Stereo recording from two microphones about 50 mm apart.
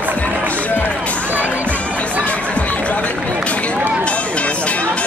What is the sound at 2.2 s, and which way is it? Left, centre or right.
Music, left.